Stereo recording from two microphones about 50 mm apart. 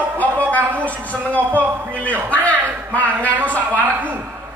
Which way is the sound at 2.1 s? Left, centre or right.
Left.